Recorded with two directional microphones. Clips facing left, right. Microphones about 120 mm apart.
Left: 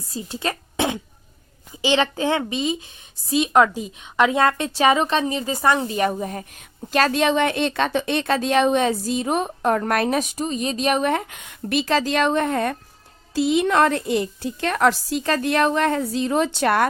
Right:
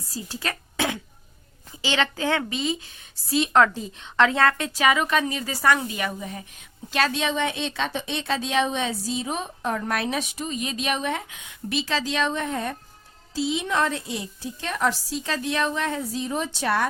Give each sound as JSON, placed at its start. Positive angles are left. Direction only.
{"t": 0.1, "sound": "a woman's voice", "side_deg": 25}
{"t": 6.0, "sound": "a woman's voice", "side_deg": 45}